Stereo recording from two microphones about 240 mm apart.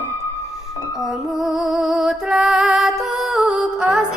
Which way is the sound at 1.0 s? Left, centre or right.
Centre.